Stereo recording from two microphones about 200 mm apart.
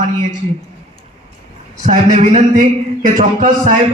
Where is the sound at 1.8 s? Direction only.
35° right (ahead or behind).